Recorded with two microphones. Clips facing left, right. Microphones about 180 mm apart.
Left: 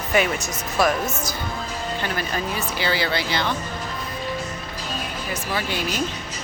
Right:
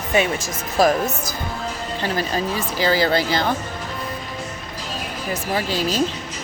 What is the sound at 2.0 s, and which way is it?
Speech, 35° right (ahead or behind).